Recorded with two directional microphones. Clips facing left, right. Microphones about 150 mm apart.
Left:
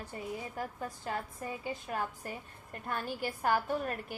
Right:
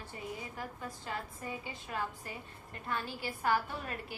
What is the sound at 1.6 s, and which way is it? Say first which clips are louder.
A woman's voice: left 5 dB; 45° left (ahead or behind).